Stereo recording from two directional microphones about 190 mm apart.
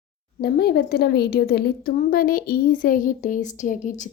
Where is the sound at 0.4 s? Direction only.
55° left (ahead or behind).